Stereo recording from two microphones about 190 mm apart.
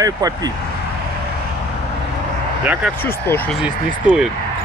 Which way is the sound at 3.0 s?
10° left (ahead or behind).